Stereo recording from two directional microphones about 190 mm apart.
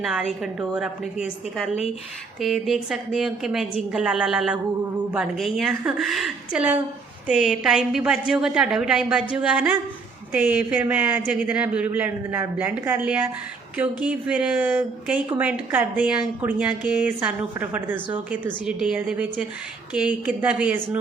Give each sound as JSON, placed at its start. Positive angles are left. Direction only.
{"t": 0.0, "sound": "a woman's voice", "side_deg": 0}